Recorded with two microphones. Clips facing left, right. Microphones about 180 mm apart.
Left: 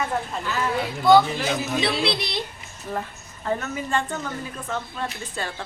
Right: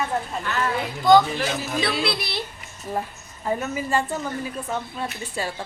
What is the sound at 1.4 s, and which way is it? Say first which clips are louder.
A man's voice: left 1 dB; 25° left (ahead or behind).